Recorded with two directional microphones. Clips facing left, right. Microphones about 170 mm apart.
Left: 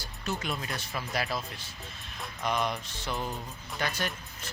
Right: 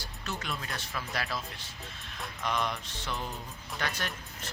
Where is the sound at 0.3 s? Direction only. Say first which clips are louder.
Left 4 dB; 15° left (ahead or behind).